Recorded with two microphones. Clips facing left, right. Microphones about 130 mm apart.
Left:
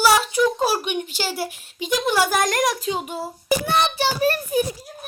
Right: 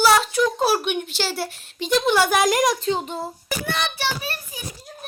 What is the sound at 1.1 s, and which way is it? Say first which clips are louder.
A woman's voice: even; 10° left (ahead or behind).